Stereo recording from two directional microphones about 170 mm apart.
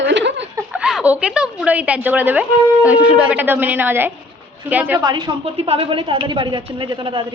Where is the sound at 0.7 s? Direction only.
5° right (ahead or behind).